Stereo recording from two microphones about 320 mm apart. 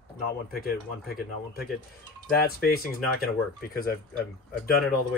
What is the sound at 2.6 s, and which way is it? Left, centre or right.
Speech, left.